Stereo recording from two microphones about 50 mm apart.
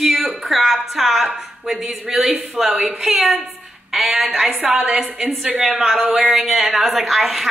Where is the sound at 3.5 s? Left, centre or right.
Centre.